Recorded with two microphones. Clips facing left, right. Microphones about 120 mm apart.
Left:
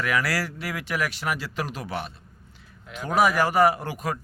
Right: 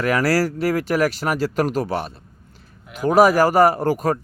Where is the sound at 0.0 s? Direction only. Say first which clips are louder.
Right 8 dB; 40° right (ahead or behind).